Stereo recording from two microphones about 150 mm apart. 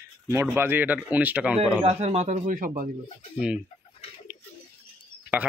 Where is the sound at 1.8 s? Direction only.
45° right (ahead or behind); by 2.9 s 65° right (ahead or behind).